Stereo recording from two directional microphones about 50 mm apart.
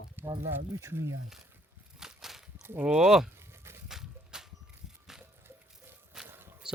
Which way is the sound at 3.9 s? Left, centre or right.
Centre.